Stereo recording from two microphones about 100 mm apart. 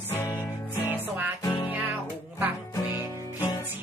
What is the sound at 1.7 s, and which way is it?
Music, 15° right (ahead or behind).